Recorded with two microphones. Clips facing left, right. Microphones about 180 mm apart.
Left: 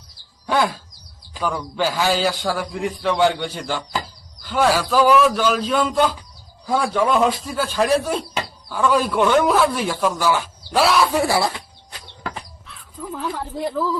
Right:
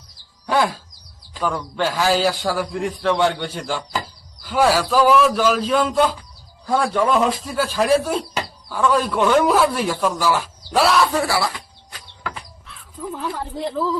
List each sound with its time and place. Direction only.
0.4 s a man's voice: centre (ahead or behind)
11.1 s chicken: 15° left (ahead or behind)
12.6 s crow: centre (ahead or behind)